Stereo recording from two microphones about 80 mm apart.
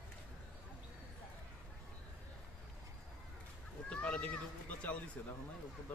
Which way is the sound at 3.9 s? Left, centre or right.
Centre.